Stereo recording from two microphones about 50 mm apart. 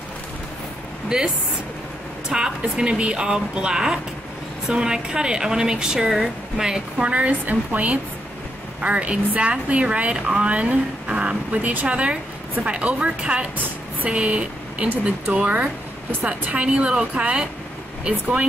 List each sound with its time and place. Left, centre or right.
1.0 s a woman's voice: centre
7.1 s speech: right